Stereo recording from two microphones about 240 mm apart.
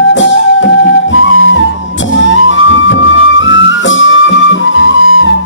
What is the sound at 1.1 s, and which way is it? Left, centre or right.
Music, left.